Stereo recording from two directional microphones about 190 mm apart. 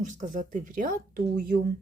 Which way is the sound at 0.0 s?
40° right (ahead or behind).